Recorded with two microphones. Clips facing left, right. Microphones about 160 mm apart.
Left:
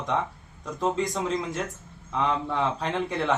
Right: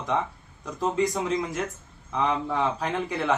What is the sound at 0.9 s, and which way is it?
A man's voice, centre (ahead or behind).